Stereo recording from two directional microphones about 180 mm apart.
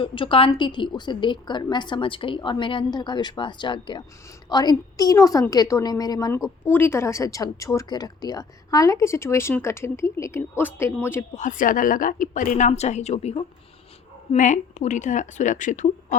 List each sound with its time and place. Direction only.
0.0 s a woman's voice: 30° left (ahead or behind); by 11.3 s 15° left (ahead or behind)
11.3 s a woman's voice: 45° left (ahead or behind)